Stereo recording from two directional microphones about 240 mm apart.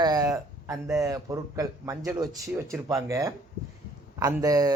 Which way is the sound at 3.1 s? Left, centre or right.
Centre.